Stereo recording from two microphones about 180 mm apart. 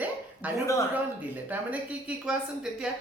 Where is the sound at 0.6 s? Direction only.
15° left (ahead or behind).